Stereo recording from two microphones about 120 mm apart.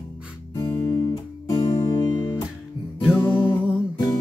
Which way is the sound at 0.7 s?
20° left (ahead or behind).